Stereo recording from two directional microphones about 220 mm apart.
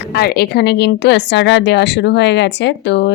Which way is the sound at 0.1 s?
45° left (ahead or behind).